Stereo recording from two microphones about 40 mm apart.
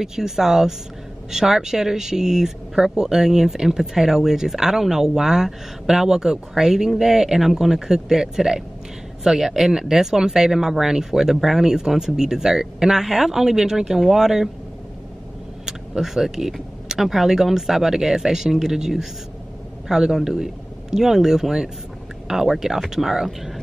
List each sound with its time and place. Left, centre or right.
0.0 s speech: centre
15.6 s speech: centre